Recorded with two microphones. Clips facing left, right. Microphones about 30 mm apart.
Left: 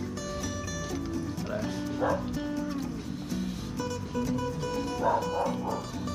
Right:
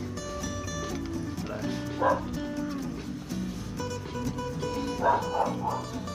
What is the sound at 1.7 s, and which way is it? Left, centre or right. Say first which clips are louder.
Music: right 4 dB; centre.